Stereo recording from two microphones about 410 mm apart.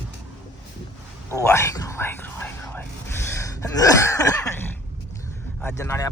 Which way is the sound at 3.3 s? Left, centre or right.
Centre.